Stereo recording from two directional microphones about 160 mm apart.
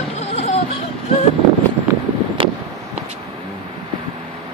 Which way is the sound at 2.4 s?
35° right (ahead or behind).